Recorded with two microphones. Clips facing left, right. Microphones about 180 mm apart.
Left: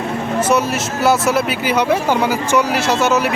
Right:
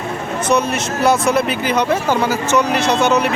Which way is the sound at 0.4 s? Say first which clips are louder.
Right 2 dB; 5° left (ahead or behind).